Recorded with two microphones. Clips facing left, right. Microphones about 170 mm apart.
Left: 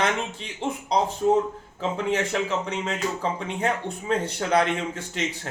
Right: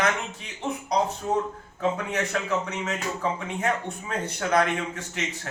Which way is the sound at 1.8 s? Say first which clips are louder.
Left 1 dB; 25° left (ahead or behind).